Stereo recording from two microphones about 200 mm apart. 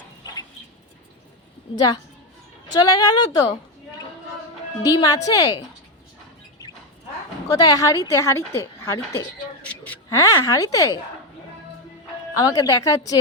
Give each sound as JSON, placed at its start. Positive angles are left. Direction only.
{"t": 1.7, "sound": "speech", "side_deg": 20}
{"t": 4.8, "sound": "a woman's voice", "side_deg": 15}
{"t": 7.4, "sound": "a woman's voice", "side_deg": 20}
{"t": 12.3, "sound": "a woman's voice", "side_deg": 15}